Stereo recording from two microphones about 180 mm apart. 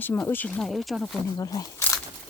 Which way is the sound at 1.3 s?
20° left (ahead or behind).